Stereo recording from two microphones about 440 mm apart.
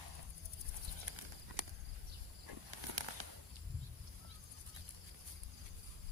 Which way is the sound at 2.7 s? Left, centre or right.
Right.